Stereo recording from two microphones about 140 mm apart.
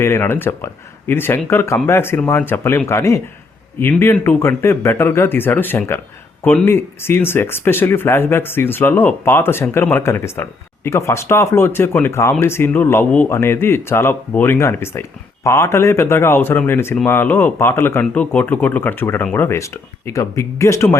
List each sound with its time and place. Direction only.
0.0 s speech: 15° left (ahead or behind)